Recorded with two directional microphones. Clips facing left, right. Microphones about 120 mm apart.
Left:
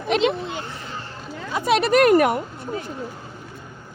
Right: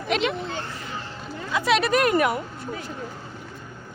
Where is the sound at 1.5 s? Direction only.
50° left (ahead or behind).